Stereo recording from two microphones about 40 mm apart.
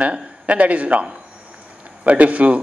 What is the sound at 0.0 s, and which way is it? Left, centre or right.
A man's voice, right.